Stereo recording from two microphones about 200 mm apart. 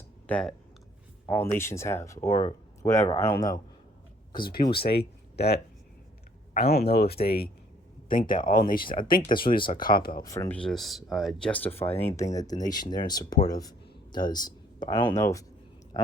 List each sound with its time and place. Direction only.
0.3 s speech: 5° left (ahead or behind)
2.3 s speech: 35° left (ahead or behind)
3.1 s speech: 25° left (ahead or behind)
4.8 s speech: 55° left (ahead or behind)
9.6 s speech: 25° left (ahead or behind)
9.8 s speech: 45° left (ahead or behind)
10.2 s speech: 15° left (ahead or behind)